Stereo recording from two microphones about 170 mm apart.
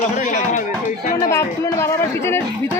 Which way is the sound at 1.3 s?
15° left (ahead or behind).